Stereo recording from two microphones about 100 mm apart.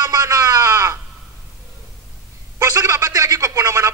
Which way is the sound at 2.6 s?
35° right (ahead or behind).